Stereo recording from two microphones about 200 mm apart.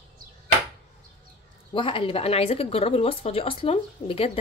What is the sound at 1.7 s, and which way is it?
Speech, 25° left (ahead or behind).